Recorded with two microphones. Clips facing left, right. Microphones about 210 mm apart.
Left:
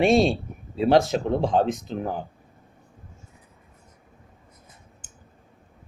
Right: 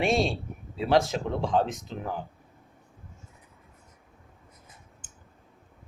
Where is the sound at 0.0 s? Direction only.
25° left (ahead or behind).